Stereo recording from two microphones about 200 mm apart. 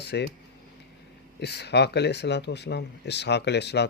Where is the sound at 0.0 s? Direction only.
55° left (ahead or behind).